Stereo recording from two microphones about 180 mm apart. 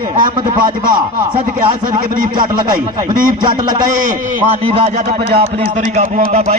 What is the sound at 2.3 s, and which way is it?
A man's voice, 25° right (ahead or behind).